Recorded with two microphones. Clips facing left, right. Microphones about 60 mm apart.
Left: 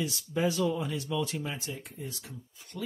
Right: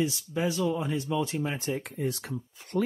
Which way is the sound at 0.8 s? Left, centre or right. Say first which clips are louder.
Right 3 dB; right.